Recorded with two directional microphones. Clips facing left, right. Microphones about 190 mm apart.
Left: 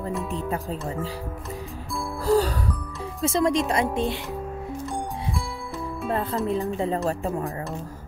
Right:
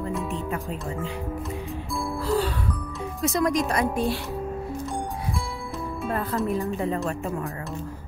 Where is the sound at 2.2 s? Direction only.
40° left (ahead or behind).